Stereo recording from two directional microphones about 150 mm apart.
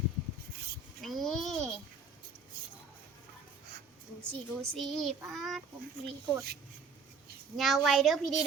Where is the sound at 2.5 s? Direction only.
90° right.